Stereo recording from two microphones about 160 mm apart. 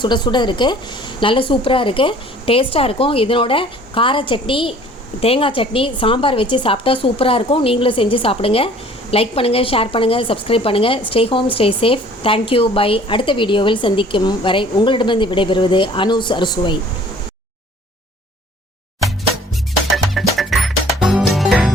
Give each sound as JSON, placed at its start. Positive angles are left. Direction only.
{"t": 0.0, "sound": "a woman's voice", "side_deg": 30}
{"t": 20.1, "sound": "music", "side_deg": 0}